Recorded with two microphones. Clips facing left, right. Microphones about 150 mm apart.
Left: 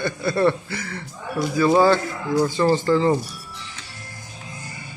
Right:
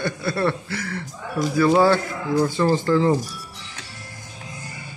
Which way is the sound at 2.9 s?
5° right (ahead or behind).